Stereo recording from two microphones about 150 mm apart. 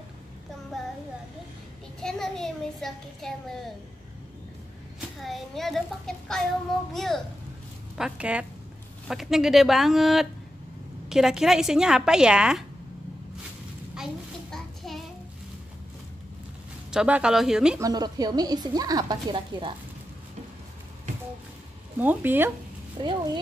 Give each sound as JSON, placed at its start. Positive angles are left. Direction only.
{"t": 2.0, "sound": "a child's voice", "side_deg": 5}
{"t": 5.2, "sound": "a child's voice", "side_deg": 0}
{"t": 8.0, "sound": "a woman's voice", "side_deg": -10}
{"t": 13.9, "sound": "child singing", "side_deg": 0}
{"t": 16.9, "sound": "a woman's voice", "side_deg": -5}
{"t": 17.7, "sound": "speech", "side_deg": -25}
{"t": 21.9, "sound": "speech", "side_deg": -15}
{"t": 23.0, "sound": "speech", "side_deg": -30}